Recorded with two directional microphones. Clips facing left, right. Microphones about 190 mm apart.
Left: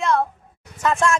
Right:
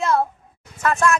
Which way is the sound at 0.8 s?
25° left (ahead or behind).